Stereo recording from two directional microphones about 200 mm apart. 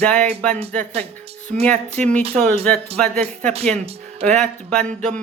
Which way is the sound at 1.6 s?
5° left (ahead or behind).